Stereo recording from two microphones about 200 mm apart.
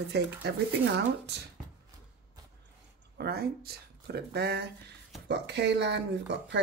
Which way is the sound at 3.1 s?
50° right (ahead or behind).